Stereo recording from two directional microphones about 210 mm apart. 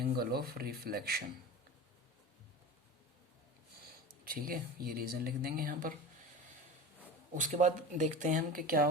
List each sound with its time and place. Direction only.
0.0 s speech: 45° right (ahead or behind)
4.2 s speech: 45° right (ahead or behind)
7.3 s speech: 35° right (ahead or behind)